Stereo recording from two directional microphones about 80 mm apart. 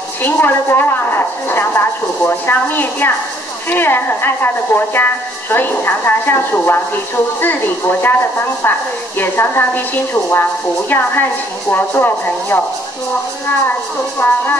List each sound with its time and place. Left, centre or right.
0.2 s a woman's voice: left
10.9 s a woman's voice: left
14.2 s a woman's voice: left